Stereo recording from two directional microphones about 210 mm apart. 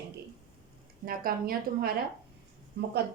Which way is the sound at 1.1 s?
45° right (ahead or behind).